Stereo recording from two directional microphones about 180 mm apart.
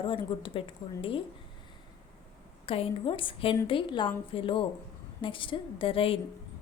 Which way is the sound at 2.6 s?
30° left (ahead or behind).